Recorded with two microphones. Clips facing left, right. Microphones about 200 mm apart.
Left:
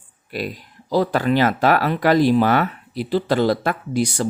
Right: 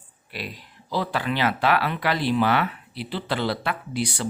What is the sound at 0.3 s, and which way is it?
Speech, 45° left (ahead or behind).